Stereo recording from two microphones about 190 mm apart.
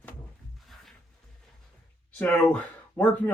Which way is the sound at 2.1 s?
5° left (ahead or behind).